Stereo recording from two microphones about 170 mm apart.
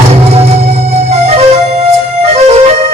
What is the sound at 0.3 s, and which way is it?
Music, 35° right (ahead or behind).